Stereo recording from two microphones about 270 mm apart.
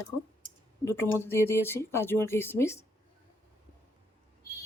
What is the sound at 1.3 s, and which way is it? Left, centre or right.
Speech, centre.